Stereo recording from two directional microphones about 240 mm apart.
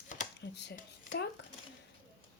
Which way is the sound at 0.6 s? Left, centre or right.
Left.